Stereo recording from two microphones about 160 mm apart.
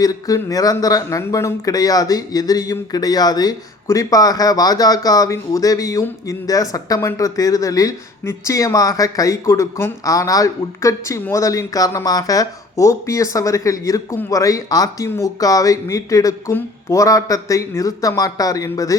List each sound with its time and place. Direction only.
0.0 s speech: 20° left (ahead or behind)